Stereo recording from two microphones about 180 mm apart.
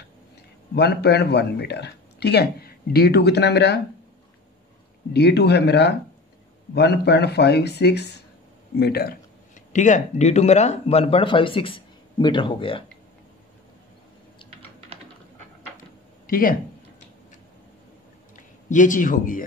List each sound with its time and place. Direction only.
0.7 s speech: 65° left (ahead or behind)
5.1 s speech: 65° left (ahead or behind)
9.7 s speech: 45° left (ahead or behind); by 12.8 s 30° left (ahead or behind)
16.3 s speech: 50° left (ahead or behind)
18.3 s speech: 45° left (ahead or behind)